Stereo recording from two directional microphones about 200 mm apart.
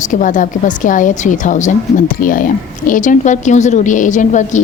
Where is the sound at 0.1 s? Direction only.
40° left (ahead or behind).